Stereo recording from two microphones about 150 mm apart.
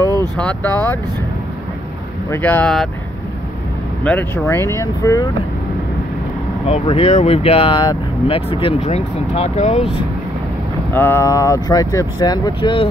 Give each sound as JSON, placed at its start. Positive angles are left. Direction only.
{"t": 0.4, "sound": "speech", "side_deg": 10}
{"t": 2.3, "sound": "speech", "side_deg": 10}
{"t": 4.0, "sound": "speech", "side_deg": 10}
{"t": 6.7, "sound": "speech", "side_deg": 45}
{"t": 10.9, "sound": "speech", "side_deg": 15}